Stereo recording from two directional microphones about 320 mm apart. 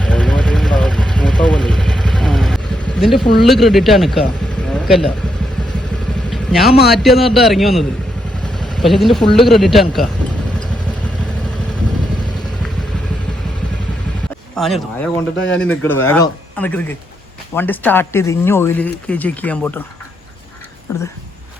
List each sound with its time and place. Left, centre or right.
0.0 s vehicle: centre
3.0 s speech: centre
6.3 s vehicle: centre
6.9 s speech: centre
14.5 s speech: centre
15.4 s speech: left
15.6 s speech: centre